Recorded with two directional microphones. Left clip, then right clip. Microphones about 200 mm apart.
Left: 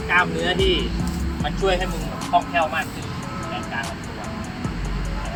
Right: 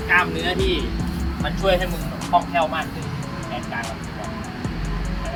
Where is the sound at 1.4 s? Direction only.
30° right (ahead or behind).